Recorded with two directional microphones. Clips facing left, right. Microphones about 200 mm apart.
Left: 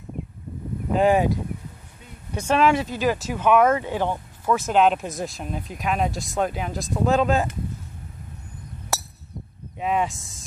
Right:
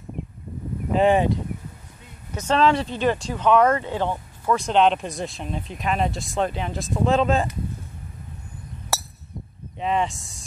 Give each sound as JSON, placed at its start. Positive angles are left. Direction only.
{"t": 0.9, "sound": "speech", "side_deg": 5}
{"t": 2.3, "sound": "speech", "side_deg": 10}
{"t": 8.9, "sound": "a sound", "side_deg": 0}
{"t": 9.8, "sound": "speech", "side_deg": 5}